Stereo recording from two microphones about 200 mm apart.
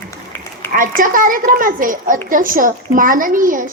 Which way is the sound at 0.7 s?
40° right (ahead or behind).